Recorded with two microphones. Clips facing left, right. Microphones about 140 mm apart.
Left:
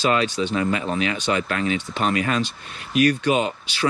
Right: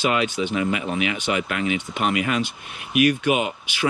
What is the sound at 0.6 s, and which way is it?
Speech, 35° left (ahead or behind).